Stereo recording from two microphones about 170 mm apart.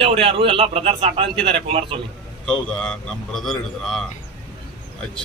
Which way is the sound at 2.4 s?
5° left (ahead or behind).